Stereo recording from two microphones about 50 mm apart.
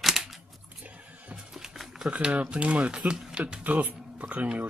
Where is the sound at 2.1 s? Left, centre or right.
Right.